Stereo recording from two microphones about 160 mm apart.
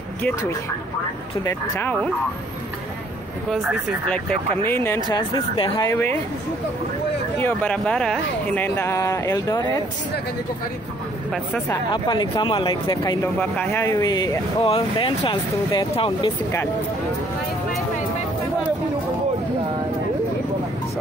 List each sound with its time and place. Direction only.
1.4 s speech: 15° left (ahead or behind)
4.6 s speech: 15° left (ahead or behind)
5.1 s speech: 25° left (ahead or behind)
7.3 s speech: 10° left (ahead or behind)
11.9 s speech: 25° left (ahead or behind)
13.4 s speech: 10° left (ahead or behind)
14.6 s speech: 35° left (ahead or behind)